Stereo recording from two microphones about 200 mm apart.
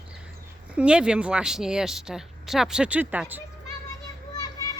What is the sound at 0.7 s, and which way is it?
A woman's voice, 5° right (ahead or behind).